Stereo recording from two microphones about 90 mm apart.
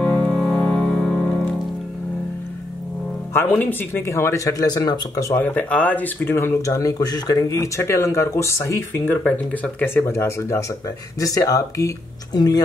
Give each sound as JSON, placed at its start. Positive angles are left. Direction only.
{"t": 0.2, "sound": "music", "side_deg": 0}
{"t": 0.5, "sound": "music", "side_deg": 10}
{"t": 3.9, "sound": "speech", "side_deg": 30}
{"t": 5.3, "sound": "speech", "side_deg": 15}
{"t": 6.3, "sound": "speech", "side_deg": 30}
{"t": 6.7, "sound": "speech", "side_deg": 40}
{"t": 10.1, "sound": "speech", "side_deg": 30}